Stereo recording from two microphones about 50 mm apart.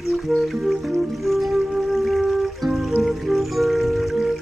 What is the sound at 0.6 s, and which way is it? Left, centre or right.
Music, centre.